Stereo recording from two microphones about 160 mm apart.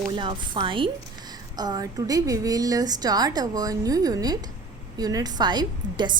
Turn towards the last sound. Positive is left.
turn(degrees=-25)  # may be behind; listen again after turning